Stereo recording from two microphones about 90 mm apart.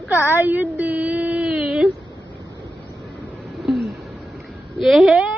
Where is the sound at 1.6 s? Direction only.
5° right (ahead or behind).